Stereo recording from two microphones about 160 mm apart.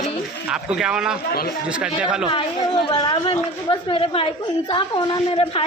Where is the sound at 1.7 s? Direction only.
5° right (ahead or behind).